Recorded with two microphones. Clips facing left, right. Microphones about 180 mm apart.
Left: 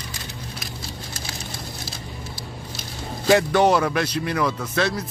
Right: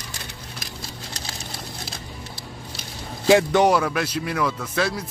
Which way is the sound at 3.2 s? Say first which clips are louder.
Right 1 dB; 15° right (ahead or behind).